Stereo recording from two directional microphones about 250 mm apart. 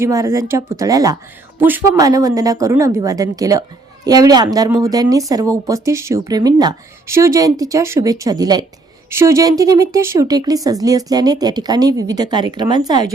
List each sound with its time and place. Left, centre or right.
0.0 s speech: centre